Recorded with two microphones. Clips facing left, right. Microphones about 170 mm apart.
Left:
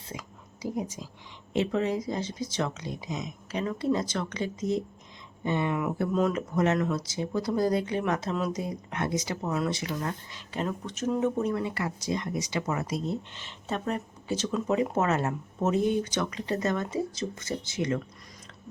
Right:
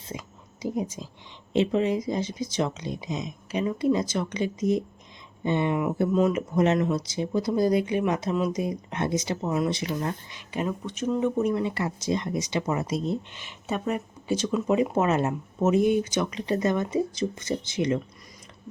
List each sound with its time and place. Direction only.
0.1 s whispering: 20° right (ahead or behind)
1.5 s speech: 20° right (ahead or behind)
6.1 s speech: 5° right (ahead or behind)
6.6 s speech: 20° right (ahead or behind)
8.9 s speech: 25° right (ahead or behind)
10.8 s speech: centre (ahead or behind)
11.4 s speech: 20° right (ahead or behind)